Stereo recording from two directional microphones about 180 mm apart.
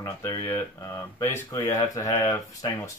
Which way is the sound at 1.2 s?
15° left (ahead or behind).